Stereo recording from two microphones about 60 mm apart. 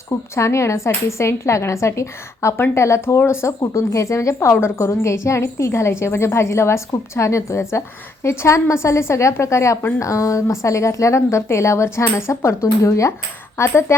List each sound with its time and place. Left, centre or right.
0.1 s a woman's voice: left
3.6 s a woman's voice: left
12.8 s a woman's voice: left